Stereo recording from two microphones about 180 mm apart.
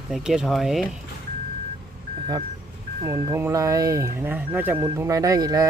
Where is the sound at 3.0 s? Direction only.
15° right (ahead or behind).